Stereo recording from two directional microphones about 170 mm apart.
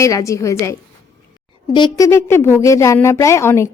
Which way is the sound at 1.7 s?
25° left (ahead or behind).